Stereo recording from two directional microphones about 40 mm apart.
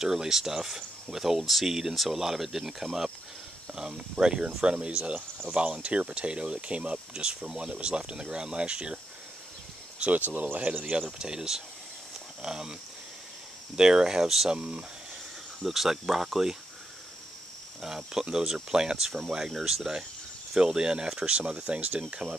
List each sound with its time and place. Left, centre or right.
0.0 s speech: centre
1.7 s speech: centre
10.1 s speech: right
10.6 s speech: right
13.7 s speech: centre
14.5 s speech: right
15.6 s speech: centre
17.8 s speech: centre
19.5 s speech: centre; by 22.4 s right